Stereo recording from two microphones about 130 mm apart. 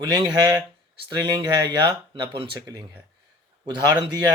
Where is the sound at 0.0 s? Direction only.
35° right (ahead or behind).